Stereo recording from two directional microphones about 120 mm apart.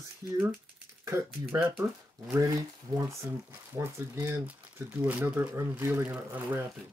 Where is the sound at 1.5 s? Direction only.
25° right (ahead or behind).